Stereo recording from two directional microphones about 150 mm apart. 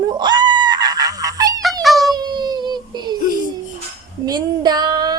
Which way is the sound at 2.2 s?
30° right (ahead or behind).